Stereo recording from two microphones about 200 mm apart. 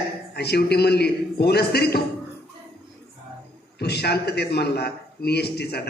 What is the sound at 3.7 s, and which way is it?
A man's voice, 55° left (ahead or behind).